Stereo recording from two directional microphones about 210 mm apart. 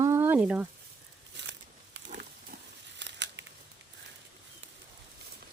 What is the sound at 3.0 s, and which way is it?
Scissors, 60° right (ahead or behind).